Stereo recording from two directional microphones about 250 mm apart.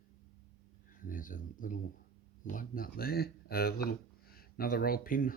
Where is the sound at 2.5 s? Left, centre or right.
Left.